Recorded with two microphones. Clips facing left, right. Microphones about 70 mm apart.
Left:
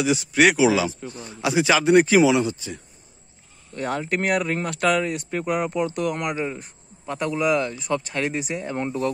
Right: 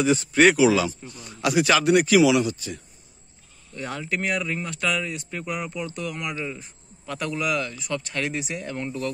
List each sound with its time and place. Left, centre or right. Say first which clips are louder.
0.0 s speech: right 1 dB; centre
0.6 s speech: even; centre
3.7 s speech: left 4 dB; left
7.1 s speech: left 5 dB; left